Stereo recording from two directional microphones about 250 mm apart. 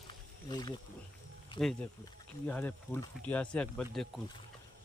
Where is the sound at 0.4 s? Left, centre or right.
Centre.